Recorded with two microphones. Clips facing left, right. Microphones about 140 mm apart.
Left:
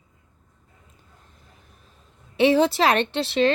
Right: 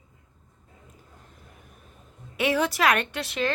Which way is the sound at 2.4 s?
25° left (ahead or behind).